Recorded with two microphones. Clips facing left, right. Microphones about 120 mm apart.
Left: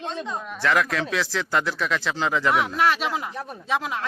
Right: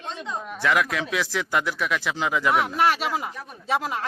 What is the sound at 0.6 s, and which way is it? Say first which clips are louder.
Speech: left 1 dB; 15° right (ahead or behind).